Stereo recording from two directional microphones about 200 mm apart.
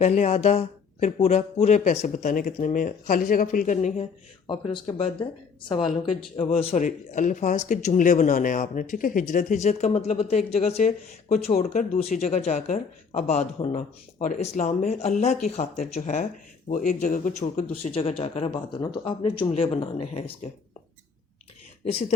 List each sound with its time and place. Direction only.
0.0 s a man's voice: 35° left (ahead or behind)
4.4 s a man's voice: 25° left (ahead or behind)